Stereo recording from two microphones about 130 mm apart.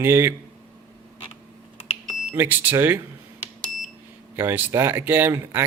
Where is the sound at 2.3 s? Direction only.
15° right (ahead or behind).